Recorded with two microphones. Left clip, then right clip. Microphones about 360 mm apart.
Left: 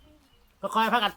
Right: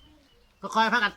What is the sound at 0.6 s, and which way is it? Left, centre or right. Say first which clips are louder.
Speech: right 1 dB; centre.